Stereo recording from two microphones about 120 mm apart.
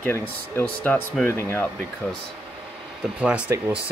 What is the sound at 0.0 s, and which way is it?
Speech, 20° left (ahead or behind).